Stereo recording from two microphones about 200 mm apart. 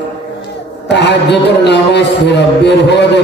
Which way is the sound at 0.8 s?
60° left (ahead or behind).